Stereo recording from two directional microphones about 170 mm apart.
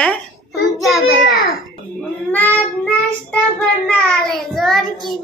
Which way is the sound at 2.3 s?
10° left (ahead or behind).